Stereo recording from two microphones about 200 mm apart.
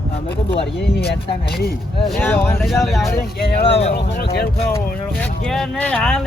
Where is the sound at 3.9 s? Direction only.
55° left (ahead or behind).